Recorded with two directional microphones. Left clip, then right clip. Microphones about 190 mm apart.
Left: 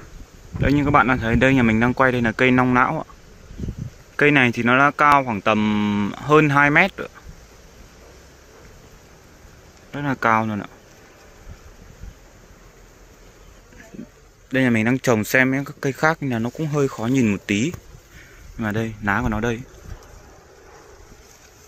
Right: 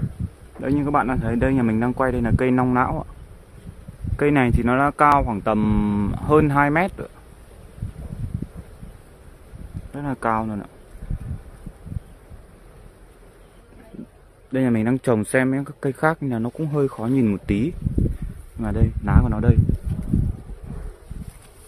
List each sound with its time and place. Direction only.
0.6 s speech: 5° left (ahead or behind)
4.2 s speech: 5° right (ahead or behind)
9.9 s speech: 5° left (ahead or behind)
14.5 s speech: 5° right (ahead or behind)